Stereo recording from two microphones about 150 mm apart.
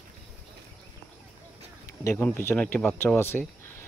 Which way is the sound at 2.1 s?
15° left (ahead or behind).